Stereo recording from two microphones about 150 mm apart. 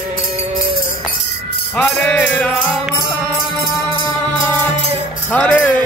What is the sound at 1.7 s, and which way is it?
Music, 10° left (ahead or behind).